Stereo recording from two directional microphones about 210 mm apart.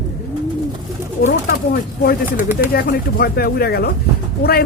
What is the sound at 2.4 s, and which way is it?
Speech, 10° right (ahead or behind).